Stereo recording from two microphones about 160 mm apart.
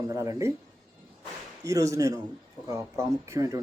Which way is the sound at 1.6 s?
20° right (ahead or behind).